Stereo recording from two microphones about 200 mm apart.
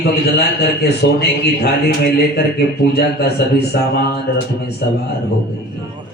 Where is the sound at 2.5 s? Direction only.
55° left (ahead or behind).